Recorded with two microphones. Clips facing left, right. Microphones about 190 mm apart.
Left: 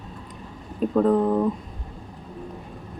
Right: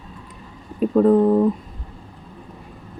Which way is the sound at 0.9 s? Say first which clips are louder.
Right 5 dB; 10° right (ahead or behind).